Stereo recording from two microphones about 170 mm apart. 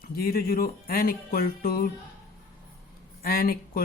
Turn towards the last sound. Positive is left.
turn(degrees=60)  # may be behind; listen again after turning